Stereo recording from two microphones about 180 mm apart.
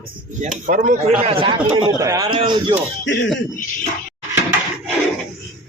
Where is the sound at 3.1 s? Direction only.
90° left.